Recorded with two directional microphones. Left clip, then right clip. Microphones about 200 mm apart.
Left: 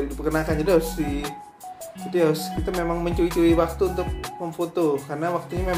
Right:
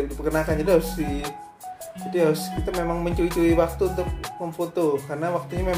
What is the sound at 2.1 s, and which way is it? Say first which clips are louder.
Music: even; 5° right (ahead or behind).